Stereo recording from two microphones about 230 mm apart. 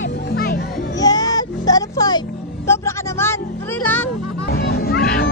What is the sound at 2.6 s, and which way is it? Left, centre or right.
Music, centre.